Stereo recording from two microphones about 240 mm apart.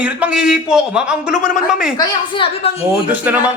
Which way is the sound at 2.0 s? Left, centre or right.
Centre.